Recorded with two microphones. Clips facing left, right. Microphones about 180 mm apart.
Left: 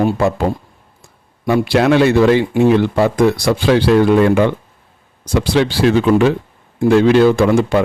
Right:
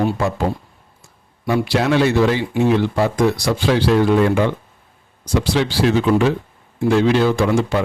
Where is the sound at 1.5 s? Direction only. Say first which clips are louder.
Left 5 dB; 60° left (ahead or behind).